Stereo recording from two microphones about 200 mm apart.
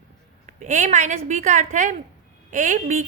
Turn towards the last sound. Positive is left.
turn(degrees=-40)  # may be behind; listen again after turning